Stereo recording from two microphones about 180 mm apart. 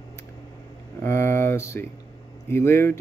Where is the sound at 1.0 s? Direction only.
15° left (ahead or behind).